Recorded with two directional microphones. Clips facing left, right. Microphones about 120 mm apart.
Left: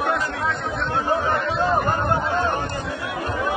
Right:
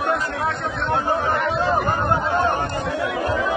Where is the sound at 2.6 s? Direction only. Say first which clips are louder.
Right 4 dB; 65° right (ahead or behind); by 3.6 s 90° right.